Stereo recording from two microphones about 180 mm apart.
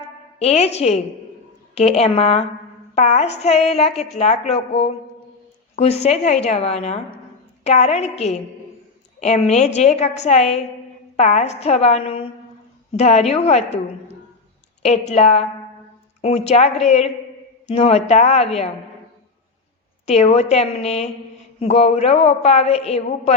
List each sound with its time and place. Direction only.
0.3 s a woman's voice: 35° left (ahead or behind)
14.8 s a woman's voice: 40° left (ahead or behind)
20.1 s a woman's voice: 35° left (ahead or behind)